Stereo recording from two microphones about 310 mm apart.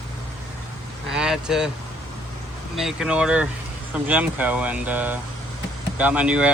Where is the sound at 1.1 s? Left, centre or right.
Centre.